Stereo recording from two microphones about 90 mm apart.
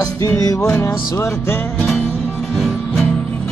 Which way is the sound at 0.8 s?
25° left (ahead or behind).